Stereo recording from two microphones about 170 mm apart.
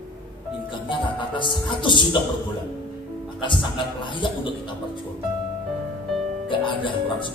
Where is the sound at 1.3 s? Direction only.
30° left (ahead or behind).